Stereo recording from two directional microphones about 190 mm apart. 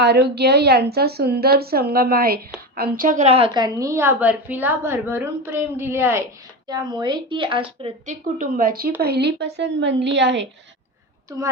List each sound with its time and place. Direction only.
0.0 s a woman's voice: 60° right (ahead or behind); by 8.1 s 30° right (ahead or behind)
8.4 s a woman's voice: 45° right (ahead or behind); by 10.4 s 65° right (ahead or behind)